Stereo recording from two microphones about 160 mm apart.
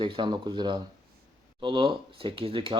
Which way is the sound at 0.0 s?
30° right (ahead or behind).